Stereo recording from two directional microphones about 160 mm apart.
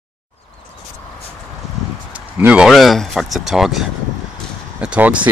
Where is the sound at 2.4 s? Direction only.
5° right (ahead or behind).